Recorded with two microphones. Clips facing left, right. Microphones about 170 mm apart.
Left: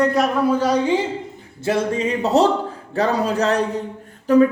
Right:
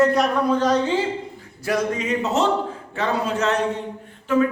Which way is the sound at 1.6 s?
30° left (ahead or behind).